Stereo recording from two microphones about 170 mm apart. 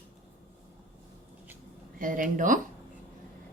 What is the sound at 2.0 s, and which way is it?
Speech, 50° right (ahead or behind).